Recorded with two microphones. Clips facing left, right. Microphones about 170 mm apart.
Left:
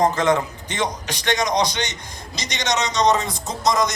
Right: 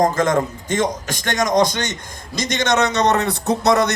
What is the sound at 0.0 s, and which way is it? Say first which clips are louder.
A man's voice: right 2 dB; 45° right (ahead or behind).